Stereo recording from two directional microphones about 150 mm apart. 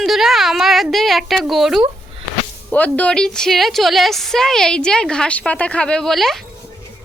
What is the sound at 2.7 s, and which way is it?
A woman's voice, 10° left (ahead or behind).